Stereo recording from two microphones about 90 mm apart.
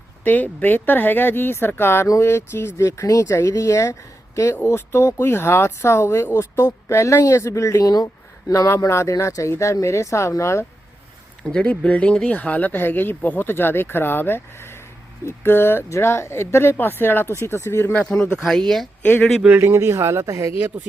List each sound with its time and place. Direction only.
0.3 s speech: 20° left (ahead or behind)
11.4 s speech: 15° left (ahead or behind)
18.1 s speech: 10° left (ahead or behind)
19.0 s speech: 20° left (ahead or behind)
19.5 s speech: 30° right (ahead or behind)
20.5 s speech: 20° right (ahead or behind)